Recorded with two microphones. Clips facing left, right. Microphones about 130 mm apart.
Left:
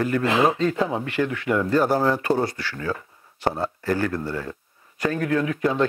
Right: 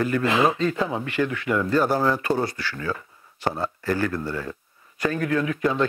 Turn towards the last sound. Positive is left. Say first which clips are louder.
# left 1 dB
turn(degrees=40)  # may be behind; listen again after turning